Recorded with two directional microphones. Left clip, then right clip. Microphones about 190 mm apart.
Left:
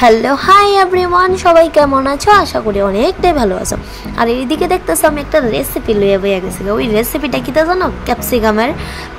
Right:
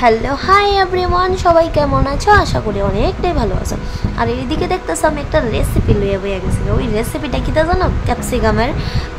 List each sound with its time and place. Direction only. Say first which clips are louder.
0.0 s a woman's voice: left 4 dB; 25° left (ahead or behind)